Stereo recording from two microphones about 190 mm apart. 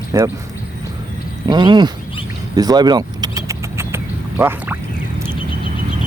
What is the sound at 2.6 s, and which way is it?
Vehicle, 20° right (ahead or behind).